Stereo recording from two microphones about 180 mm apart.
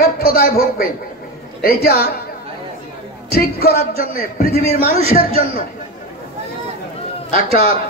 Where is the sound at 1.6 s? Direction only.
60° left (ahead or behind).